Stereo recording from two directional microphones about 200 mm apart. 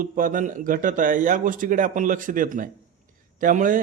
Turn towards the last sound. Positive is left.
turn(degrees=-40)  # may be behind; listen again after turning